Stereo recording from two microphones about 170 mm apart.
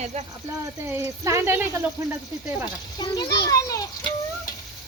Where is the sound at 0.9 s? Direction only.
15° right (ahead or behind).